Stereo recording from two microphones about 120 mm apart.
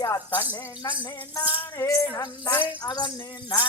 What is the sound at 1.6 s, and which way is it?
Music, 20° left (ahead or behind).